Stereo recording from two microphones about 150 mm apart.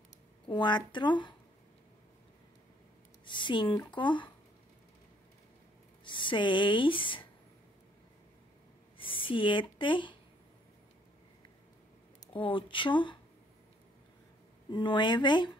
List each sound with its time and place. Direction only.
0.5 s speech: 30° left (ahead or behind)
3.3 s speech: 30° left (ahead or behind)
6.0 s speech: 30° left (ahead or behind)
8.9 s speech: 35° left (ahead or behind)
12.3 s speech: 35° left (ahead or behind)
14.7 s speech: 30° left (ahead or behind)